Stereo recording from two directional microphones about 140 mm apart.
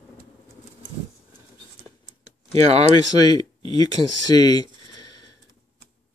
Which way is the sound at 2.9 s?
30° left (ahead or behind).